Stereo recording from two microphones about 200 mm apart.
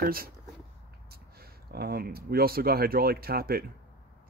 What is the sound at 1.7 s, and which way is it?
Speech, 50° right (ahead or behind).